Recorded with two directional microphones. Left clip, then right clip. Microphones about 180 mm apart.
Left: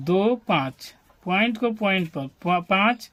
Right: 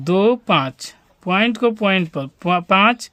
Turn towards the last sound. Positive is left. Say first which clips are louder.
# right 6 dB
turn(degrees=-50)  # may be behind; listen again after turning